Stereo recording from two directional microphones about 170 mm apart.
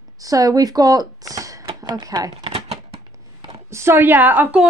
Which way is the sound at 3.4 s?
20° right (ahead or behind).